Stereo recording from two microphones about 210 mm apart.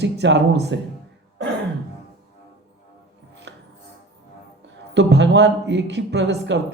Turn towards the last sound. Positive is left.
turn(degrees=-55)  # may be behind; listen again after turning